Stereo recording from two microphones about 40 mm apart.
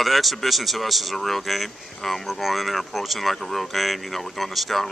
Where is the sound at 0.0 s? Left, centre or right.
Centre.